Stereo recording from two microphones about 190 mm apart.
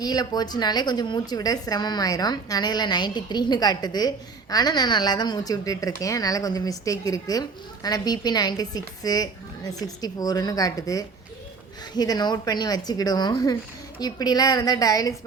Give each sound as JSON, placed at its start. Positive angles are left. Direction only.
{"t": 0.0, "sound": "a woman's voice", "side_deg": 20}